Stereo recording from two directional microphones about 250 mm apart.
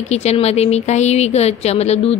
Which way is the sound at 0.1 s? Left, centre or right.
Left.